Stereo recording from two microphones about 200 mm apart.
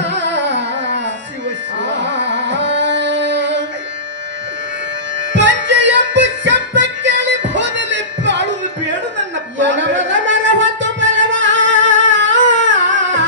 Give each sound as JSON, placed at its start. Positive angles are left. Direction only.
{"t": 0.0, "sound": "carnatic music", "side_deg": -60}
{"t": 1.9, "sound": "music", "side_deg": -60}
{"t": 5.3, "sound": "music", "side_deg": -65}
{"t": 9.6, "sound": "a sound", "side_deg": -65}